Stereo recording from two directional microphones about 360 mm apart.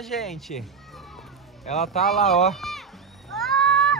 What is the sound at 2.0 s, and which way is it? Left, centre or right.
Speech, centre.